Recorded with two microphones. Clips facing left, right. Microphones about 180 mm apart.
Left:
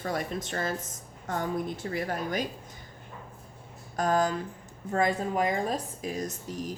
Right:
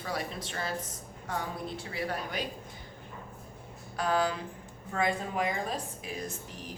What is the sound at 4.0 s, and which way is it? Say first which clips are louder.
A woman's voice: left 3 dB; 45° left (ahead or behind).